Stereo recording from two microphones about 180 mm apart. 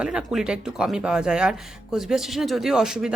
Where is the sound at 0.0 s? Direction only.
5° right (ahead or behind).